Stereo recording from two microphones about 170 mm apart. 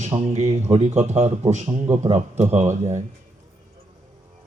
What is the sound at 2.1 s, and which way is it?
Speech, 40° right (ahead or behind).